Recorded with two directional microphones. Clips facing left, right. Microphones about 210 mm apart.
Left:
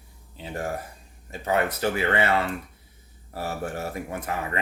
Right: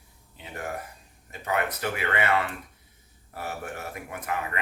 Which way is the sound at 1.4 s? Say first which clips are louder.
Left 4 dB; 30° left (ahead or behind).